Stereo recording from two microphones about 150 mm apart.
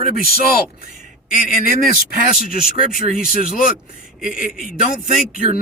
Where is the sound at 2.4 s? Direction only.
80° left.